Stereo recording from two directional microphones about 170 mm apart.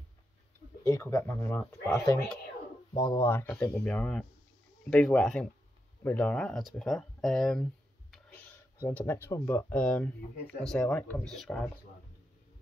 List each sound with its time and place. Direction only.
0.9 s speech: 15° left (ahead or behind)
8.8 s speech: 15° left (ahead or behind)